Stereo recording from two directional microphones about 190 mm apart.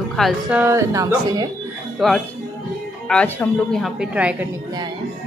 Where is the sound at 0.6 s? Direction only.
15° right (ahead or behind).